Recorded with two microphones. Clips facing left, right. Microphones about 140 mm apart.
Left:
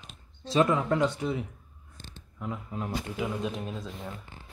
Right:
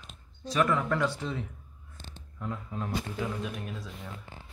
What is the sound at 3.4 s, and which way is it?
Speech, 20° left (ahead or behind).